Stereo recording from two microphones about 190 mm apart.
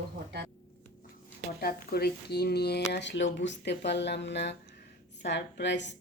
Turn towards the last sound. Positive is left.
turn(degrees=70)  # may be behind; listen again after turning